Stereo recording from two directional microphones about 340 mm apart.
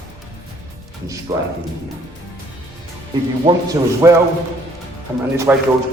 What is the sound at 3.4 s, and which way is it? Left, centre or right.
Speech, centre.